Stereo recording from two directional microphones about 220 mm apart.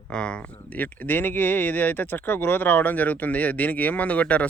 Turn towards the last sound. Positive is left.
turn(degrees=5)  # may be behind; listen again after turning